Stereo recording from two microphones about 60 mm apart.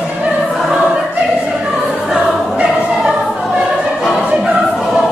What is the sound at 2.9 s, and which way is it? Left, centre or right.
Music, centre.